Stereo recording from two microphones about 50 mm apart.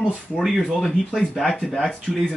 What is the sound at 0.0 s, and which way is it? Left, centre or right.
Speech, left.